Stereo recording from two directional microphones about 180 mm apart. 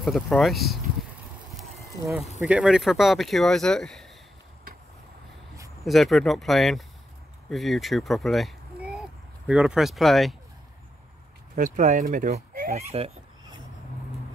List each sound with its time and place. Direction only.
0.0 s speech: centre (ahead or behind)
1.6 s a sound: centre (ahead or behind)
2.4 s speech: 5° right (ahead or behind)
5.9 s speech: centre (ahead or behind)
11.5 s speech: 45° right (ahead or behind)